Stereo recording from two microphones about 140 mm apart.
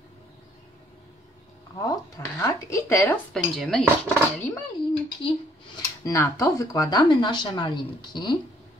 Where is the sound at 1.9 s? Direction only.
25° left (ahead or behind).